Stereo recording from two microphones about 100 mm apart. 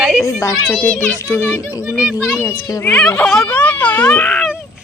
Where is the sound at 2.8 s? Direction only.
15° left (ahead or behind).